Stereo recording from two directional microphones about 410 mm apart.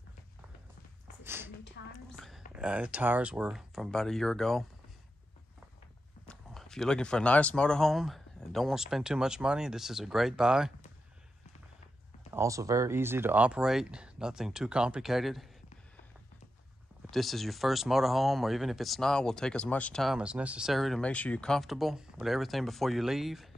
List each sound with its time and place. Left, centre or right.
1.2 s a sound: centre
1.8 s whispering: left
2.5 s speech: centre
6.2 s speech: centre
12.3 s speech: centre
17.1 s speech: centre